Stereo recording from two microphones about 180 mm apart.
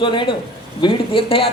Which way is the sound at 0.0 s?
25° left (ahead or behind).